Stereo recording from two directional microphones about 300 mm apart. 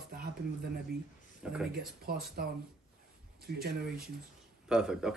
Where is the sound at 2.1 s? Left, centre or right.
Right.